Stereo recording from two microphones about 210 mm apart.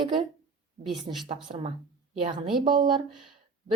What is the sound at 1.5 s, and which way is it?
Speech, 35° right (ahead or behind).